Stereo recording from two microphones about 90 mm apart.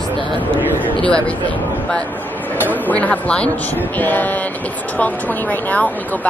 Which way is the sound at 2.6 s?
20° left (ahead or behind).